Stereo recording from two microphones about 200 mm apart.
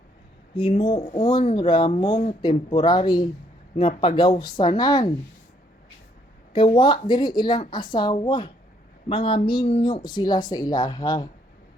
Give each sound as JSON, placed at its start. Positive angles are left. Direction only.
{"t": 0.5, "sound": "speech", "side_deg": 25}
{"t": 6.5, "sound": "speech", "side_deg": 25}